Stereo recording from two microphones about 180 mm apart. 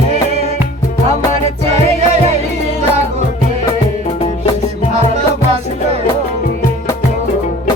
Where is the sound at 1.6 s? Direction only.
35° right (ahead or behind).